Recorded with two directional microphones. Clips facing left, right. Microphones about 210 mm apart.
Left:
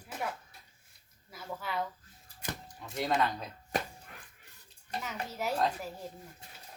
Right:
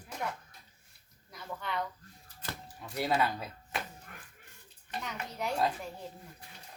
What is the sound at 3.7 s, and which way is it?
Speech, 40° left (ahead or behind).